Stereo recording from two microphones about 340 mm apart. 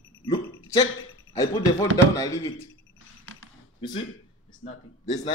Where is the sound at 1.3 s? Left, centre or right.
Centre.